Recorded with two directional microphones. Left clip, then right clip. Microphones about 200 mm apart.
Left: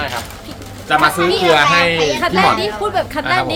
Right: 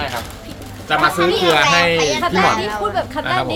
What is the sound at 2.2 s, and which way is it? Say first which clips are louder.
Speech: left 2 dB; 35° left (ahead or behind).